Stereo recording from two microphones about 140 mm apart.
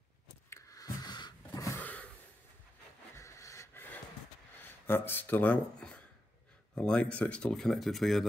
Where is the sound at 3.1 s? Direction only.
20° left (ahead or behind).